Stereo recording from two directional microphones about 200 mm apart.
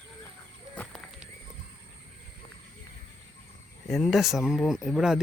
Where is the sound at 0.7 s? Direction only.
5° left (ahead or behind).